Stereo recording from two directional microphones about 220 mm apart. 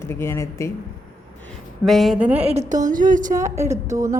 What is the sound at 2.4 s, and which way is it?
Speech, 30° right (ahead or behind).